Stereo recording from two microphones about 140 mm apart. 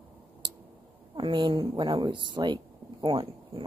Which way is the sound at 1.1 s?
35° right (ahead or behind).